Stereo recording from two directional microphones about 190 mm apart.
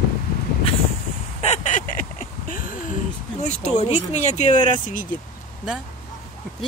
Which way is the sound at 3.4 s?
35° left (ahead or behind).